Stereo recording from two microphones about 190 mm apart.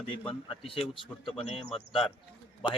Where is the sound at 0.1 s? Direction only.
30° left (ahead or behind).